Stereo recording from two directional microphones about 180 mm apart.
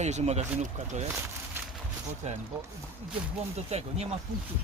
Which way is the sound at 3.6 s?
35° right (ahead or behind).